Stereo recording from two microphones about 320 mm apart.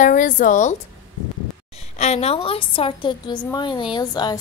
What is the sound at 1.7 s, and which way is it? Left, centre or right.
A woman's voice, left.